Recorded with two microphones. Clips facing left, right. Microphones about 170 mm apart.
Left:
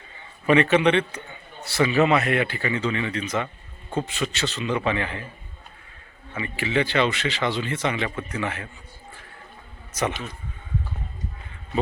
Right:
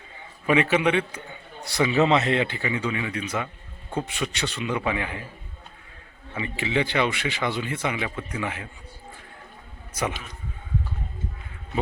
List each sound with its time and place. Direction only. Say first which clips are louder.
0.4 s speech: left 3 dB; 10° right (ahead or behind)
6.3 s speech: left 1 dB; 15° right (ahead or behind)
9.9 s a man's voice: left 2 dB; 10° right (ahead or behind)